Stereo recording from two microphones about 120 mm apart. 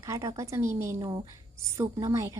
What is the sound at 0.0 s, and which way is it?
Speech, 30° right (ahead or behind).